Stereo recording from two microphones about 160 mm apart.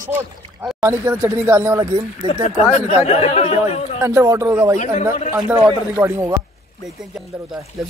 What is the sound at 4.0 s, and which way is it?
Speech, 20° right (ahead or behind).